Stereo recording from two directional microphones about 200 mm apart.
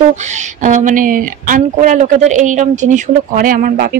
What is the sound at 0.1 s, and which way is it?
Speech, 35° right (ahead or behind).